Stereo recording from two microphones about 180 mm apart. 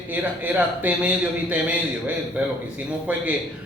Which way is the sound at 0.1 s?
10° right (ahead or behind).